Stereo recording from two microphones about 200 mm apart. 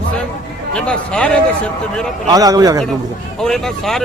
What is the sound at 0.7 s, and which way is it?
Speech, 5° left (ahead or behind).